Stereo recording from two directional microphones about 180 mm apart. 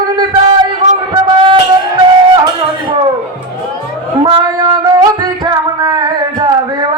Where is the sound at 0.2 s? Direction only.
25° right (ahead or behind).